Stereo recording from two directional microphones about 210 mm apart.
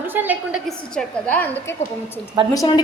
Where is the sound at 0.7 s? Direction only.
5° left (ahead or behind).